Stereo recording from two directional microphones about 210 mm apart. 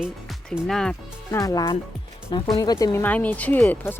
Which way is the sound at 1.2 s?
15° left (ahead or behind).